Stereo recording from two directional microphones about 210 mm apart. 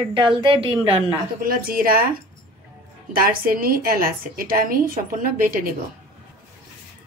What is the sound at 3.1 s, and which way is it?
A woman's voice, 45° right (ahead or behind).